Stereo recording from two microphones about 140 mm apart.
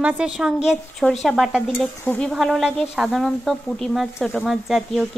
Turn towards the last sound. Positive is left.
turn(degrees=0)  # may be behind; listen again after turning